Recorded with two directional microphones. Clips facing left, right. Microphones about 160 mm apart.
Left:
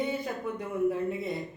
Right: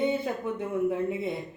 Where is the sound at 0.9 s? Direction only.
20° right (ahead or behind).